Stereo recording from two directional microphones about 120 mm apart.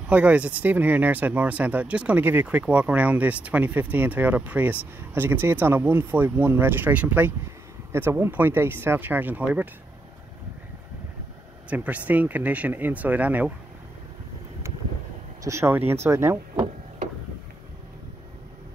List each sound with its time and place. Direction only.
0.1 s speech: 10° right (ahead or behind)
11.7 s speech: 10° right (ahead or behind)
15.4 s speech: 20° right (ahead or behind)